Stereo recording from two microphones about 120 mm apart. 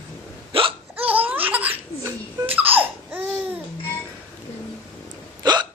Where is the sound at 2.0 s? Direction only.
25° right (ahead or behind).